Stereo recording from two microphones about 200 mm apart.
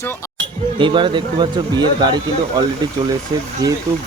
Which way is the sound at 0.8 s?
25° right (ahead or behind).